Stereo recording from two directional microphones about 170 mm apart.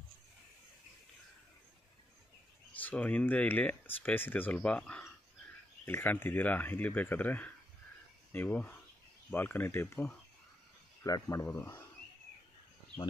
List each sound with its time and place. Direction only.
2.7 s speech: 10° left (ahead or behind)